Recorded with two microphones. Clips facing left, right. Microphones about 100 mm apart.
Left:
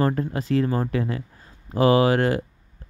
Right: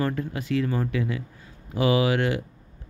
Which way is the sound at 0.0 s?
40° left (ahead or behind).